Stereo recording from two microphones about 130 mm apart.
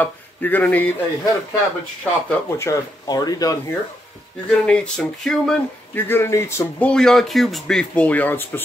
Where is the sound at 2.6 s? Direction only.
25° left (ahead or behind).